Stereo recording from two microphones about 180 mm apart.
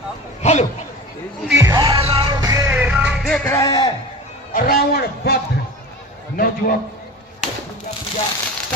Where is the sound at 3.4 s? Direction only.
15° left (ahead or behind).